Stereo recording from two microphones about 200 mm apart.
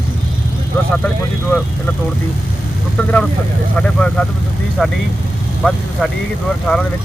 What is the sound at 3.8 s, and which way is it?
Speech, 5° left (ahead or behind).